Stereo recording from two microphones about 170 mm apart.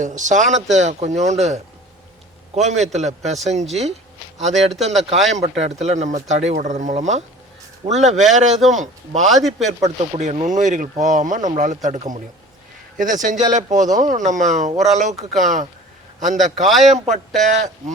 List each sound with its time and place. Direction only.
0.2 s a man's voice: 45° right (ahead or behind)
9.2 s speech: centre (ahead or behind)
10.2 s speech: 45° right (ahead or behind)
16.6 s speech: centre (ahead or behind)
17.1 s speech: 45° right (ahead or behind)